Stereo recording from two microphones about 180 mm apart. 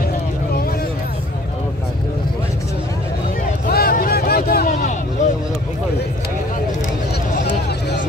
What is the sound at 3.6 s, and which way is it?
Vehicle, 55° left (ahead or behind).